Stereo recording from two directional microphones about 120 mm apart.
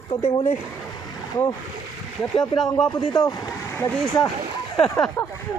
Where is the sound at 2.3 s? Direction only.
5° left (ahead or behind).